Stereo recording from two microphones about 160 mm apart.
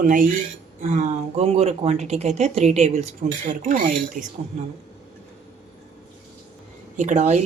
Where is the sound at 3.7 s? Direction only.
55° right (ahead or behind).